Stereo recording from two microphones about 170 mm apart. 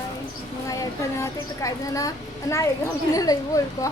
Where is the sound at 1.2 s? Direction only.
20° left (ahead or behind).